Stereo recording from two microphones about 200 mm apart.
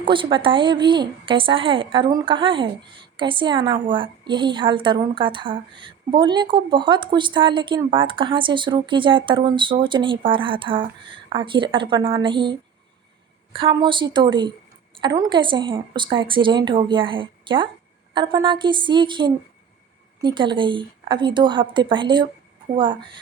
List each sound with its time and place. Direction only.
0.0 s a woman's voice: 25° right (ahead or behind)